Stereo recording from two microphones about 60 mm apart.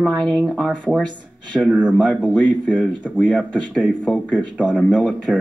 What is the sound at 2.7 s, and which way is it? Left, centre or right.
Speech, right.